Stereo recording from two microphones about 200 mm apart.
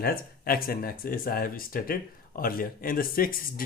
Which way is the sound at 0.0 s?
50° left (ahead or behind).